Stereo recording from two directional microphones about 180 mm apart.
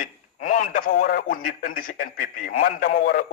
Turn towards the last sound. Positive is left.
turn(degrees=50)  # may be behind; listen again after turning